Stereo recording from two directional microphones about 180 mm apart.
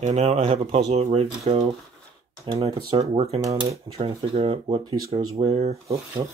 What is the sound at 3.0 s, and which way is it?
Speech, 40° right (ahead or behind).